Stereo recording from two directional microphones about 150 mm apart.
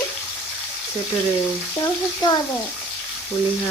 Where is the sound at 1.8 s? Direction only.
25° left (ahead or behind).